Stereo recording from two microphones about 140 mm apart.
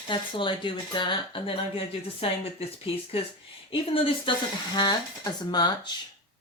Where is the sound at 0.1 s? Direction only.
35° left (ahead or behind).